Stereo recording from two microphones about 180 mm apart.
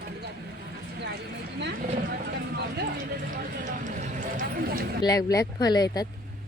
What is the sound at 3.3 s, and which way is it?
Speech, 45° right (ahead or behind).